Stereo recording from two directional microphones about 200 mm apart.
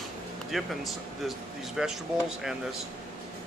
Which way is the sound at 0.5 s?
Centre (ahead or behind).